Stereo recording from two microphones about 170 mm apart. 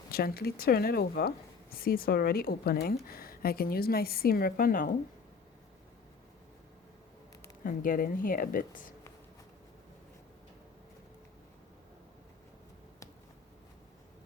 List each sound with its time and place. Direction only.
0.1 s speech: 65° left (ahead or behind)
7.6 s speech: 55° left (ahead or behind)